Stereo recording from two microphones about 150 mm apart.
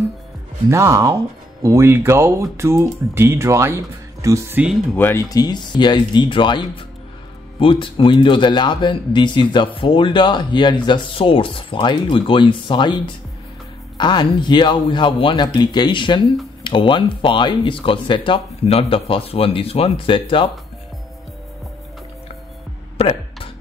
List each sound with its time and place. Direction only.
0.7 s speech: 20° right (ahead or behind)
4.9 s speech: 15° left (ahead or behind); by 20.5 s 35° left (ahead or behind)
22.9 s a sound: 40° left (ahead or behind)